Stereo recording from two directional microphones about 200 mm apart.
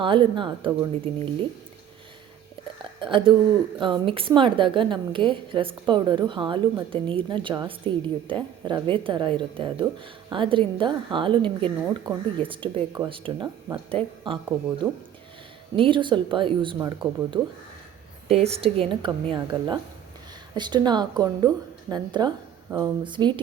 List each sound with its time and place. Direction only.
0.0 s speech: 25° right (ahead or behind)
3.0 s speech: 25° right (ahead or behind)
14.8 s speech: 10° right (ahead or behind)
15.7 s speech: 25° right (ahead or behind)